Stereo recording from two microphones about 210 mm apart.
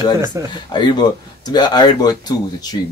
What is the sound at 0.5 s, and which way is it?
Speech, 20° left (ahead or behind).